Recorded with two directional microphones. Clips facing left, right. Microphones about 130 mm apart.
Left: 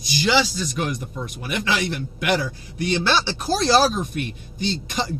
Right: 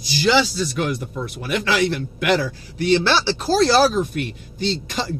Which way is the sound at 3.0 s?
15° left (ahead or behind).